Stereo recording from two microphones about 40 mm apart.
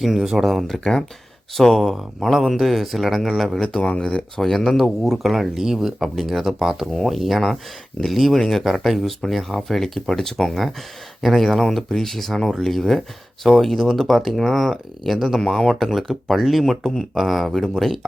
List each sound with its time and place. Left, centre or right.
0.2 s speech: centre
0.7 s speech: centre
3.7 s speech: left
4.0 s speech: centre
5.0 s speech: centre
15.4 s speech: centre